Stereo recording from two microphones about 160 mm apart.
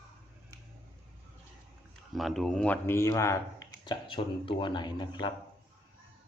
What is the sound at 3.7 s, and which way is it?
Speech, 30° left (ahead or behind).